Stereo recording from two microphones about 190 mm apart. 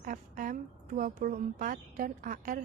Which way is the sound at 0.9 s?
45° right (ahead or behind).